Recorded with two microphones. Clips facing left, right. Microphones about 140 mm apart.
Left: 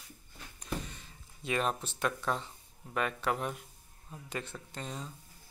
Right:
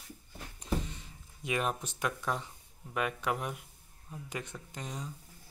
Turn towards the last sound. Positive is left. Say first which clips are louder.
# even
turn(degrees=-15)  # may be behind; listen again after turning